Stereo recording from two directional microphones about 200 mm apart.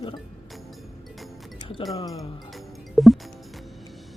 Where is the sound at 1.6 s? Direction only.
20° left (ahead or behind).